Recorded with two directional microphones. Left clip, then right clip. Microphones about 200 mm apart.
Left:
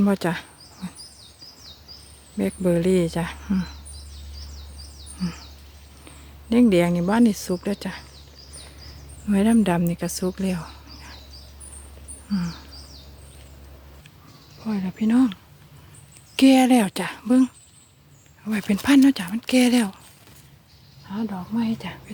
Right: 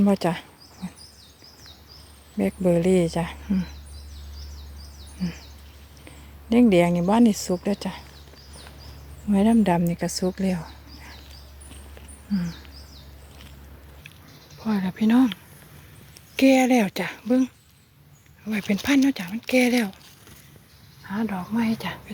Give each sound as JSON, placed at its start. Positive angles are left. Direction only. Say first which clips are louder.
{"t": 0.0, "sound": "insect", "louder": "right 1 dB", "side_deg": 5}
{"t": 2.4, "sound": "speech", "louder": "right 1 dB", "side_deg": 0}
{"t": 6.1, "sound": "speech", "louder": "even", "side_deg": 5}
{"t": 9.3, "sound": "speech", "louder": "even", "side_deg": 10}
{"t": 12.3, "sound": "speech", "louder": "left 1 dB", "side_deg": 5}
{"t": 14.6, "sound": "speech", "louder": "right 2 dB", "side_deg": 0}
{"t": 16.3, "sound": "speech", "louder": "left 2 dB", "side_deg": 15}
{"t": 21.1, "sound": "speech", "louder": "right 2 dB", "side_deg": -5}